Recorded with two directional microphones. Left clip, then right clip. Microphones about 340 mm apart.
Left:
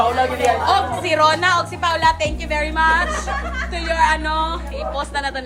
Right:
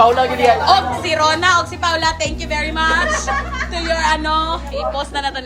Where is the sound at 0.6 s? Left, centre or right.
Centre.